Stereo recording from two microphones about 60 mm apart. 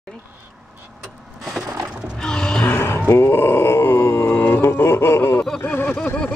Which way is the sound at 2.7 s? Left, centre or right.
Left.